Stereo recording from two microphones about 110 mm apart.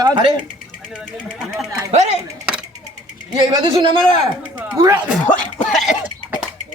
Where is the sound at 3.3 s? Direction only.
40° right (ahead or behind).